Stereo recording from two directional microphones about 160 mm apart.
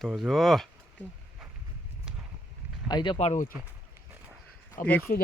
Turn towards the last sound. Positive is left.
turn(degrees=55)  # may be behind; listen again after turning